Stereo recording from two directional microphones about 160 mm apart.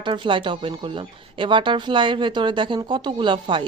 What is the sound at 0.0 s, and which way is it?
Speech, 30° right (ahead or behind).